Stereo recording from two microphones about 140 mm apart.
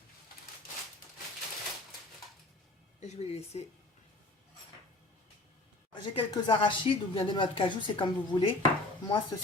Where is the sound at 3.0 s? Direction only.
50° left (ahead or behind).